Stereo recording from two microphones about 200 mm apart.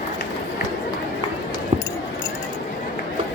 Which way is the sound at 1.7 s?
30° right (ahead or behind).